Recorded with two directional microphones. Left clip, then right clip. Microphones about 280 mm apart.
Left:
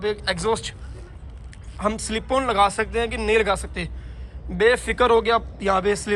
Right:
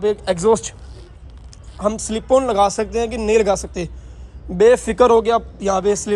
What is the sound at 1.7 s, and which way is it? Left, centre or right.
A man's voice, centre.